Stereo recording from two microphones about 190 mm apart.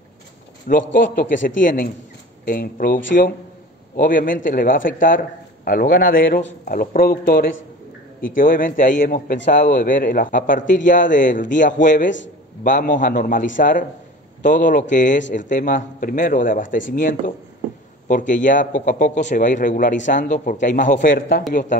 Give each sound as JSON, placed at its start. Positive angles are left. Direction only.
{"t": 0.7, "sound": "a man's voice", "side_deg": 45}